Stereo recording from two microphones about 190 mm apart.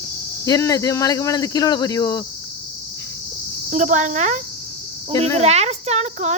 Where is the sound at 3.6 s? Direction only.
40° right (ahead or behind).